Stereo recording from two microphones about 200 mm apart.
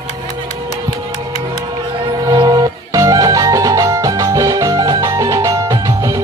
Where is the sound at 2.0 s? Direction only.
20° right (ahead or behind).